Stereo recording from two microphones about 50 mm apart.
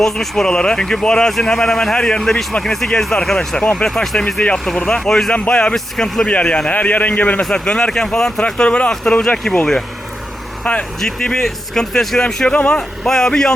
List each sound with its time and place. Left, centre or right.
0.0 s speech: centre
5.3 s a man's voice: left
5.7 s speech: centre
6.2 s a man's voice: left
7.5 s speech: centre
9.5 s speech: centre
10.6 s speech: left
11.0 s a man's voice: centre
13.1 s speech: centre